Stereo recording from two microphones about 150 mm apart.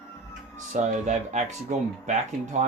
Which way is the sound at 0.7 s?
50° right (ahead or behind).